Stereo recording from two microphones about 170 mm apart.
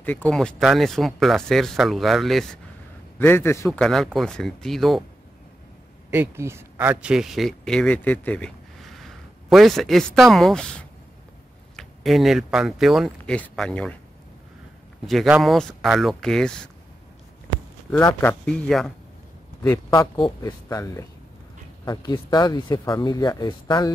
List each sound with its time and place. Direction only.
0.0 s speech: 10° left (ahead or behind)
3.2 s speech: 10° left (ahead or behind)
3.8 s speech: centre (ahead or behind)
6.0 s speech: 15° right (ahead or behind); by 13.9 s 5° left (ahead or behind)
15.0 s speech: centre (ahead or behind)
18.0 s speech: 10° left (ahead or behind)
20.2 s speech: 20° left (ahead or behind)